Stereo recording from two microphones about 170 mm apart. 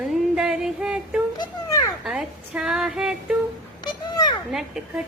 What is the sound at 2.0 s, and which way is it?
Female singing, 5° right (ahead or behind).